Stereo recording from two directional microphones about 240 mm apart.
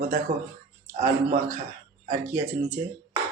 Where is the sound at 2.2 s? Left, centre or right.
Centre.